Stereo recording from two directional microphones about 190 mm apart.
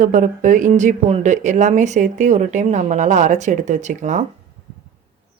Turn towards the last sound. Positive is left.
turn(degrees=-40)  # may be behind; listen again after turning